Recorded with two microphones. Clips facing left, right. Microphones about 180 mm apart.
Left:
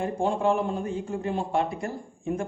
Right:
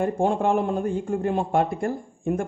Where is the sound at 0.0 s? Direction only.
55° right (ahead or behind).